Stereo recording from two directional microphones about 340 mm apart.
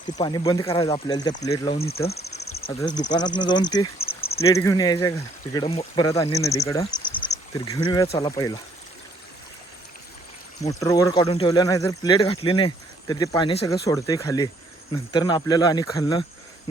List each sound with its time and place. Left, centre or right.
0.2 s speech: centre
1.8 s speech: left
2.6 s speech: centre
10.6 s speech: centre